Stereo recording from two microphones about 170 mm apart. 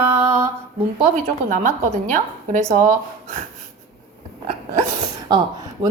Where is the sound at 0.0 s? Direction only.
15° right (ahead or behind).